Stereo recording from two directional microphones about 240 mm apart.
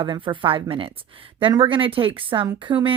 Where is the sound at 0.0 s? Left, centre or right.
Right.